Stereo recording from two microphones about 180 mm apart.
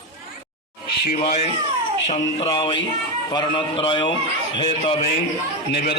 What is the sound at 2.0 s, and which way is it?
A man's voice, 35° left (ahead or behind).